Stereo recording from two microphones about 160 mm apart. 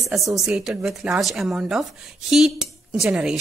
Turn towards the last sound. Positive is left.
turn(degrees=-5)  # may be behind; listen again after turning